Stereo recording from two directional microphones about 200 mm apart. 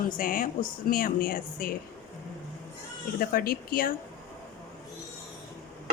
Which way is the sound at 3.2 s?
45° left (ahead or behind).